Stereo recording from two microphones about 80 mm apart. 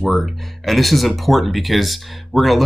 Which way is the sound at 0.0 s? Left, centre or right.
Centre.